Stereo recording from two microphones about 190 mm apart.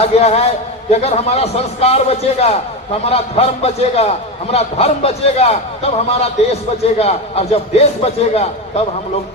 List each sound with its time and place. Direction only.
0.0 s a man's voice: 30° left (ahead or behind)